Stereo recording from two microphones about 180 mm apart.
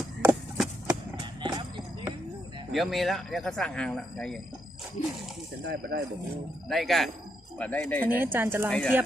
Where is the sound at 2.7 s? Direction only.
Centre (ahead or behind).